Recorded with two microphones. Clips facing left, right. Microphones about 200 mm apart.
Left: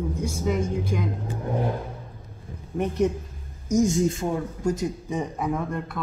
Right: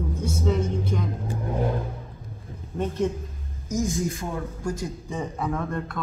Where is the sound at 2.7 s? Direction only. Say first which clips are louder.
Left 2 dB; 15° left (ahead or behind).